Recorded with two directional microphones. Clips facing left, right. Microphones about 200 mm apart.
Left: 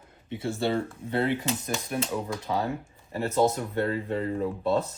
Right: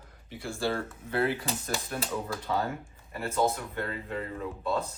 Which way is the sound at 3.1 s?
30° left (ahead or behind).